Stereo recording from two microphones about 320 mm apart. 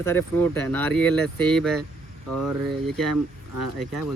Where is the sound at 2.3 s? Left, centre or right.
Right.